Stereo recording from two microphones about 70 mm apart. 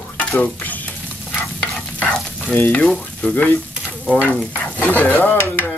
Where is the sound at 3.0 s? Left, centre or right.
Left.